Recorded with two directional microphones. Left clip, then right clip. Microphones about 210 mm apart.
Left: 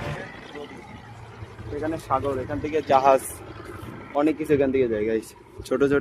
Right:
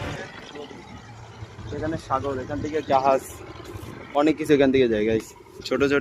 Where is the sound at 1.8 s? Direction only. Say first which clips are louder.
Left 1 dB; 15° right (ahead or behind).